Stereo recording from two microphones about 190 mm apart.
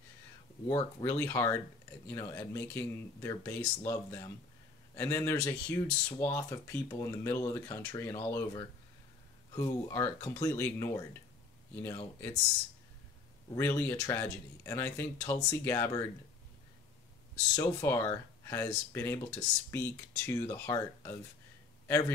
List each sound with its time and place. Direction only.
1.0 s speech: 15° left (ahead or behind)
13.6 s speech: 15° left (ahead or behind)
17.6 s speech: 15° left (ahead or behind)